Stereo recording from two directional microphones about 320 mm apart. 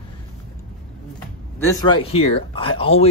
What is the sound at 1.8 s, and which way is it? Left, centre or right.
Speech, centre.